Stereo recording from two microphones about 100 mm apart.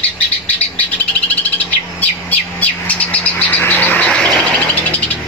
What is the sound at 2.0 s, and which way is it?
Bird, 15° left (ahead or behind).